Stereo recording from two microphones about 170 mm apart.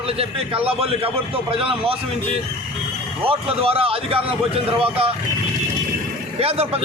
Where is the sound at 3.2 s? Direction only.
35° right (ahead or behind).